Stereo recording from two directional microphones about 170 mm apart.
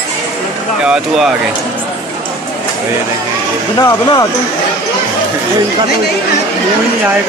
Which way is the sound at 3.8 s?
20° left (ahead or behind).